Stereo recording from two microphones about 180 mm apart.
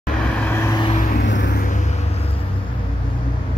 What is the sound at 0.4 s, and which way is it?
Vehicle, 15° left (ahead or behind).